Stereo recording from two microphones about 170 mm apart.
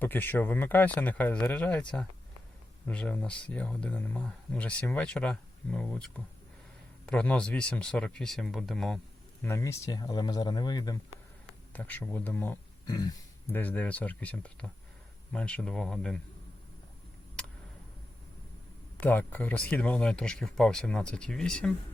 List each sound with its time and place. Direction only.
0.0 s speech: 10° left (ahead or behind)
2.8 s speech: 10° left (ahead or behind)
9.4 s speech: 15° left (ahead or behind)
11.7 s speech: 10° left (ahead or behind)
12.9 s speech: 20° left (ahead or behind)
13.5 s speech: 10° left (ahead or behind)
18.9 s speech: 10° left (ahead or behind)